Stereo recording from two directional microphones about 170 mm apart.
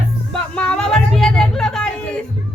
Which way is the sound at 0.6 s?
5° left (ahead or behind).